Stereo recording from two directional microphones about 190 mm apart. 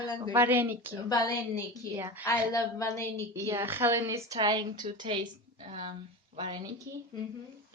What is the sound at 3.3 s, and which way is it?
A woman's voice, 15° right (ahead or behind).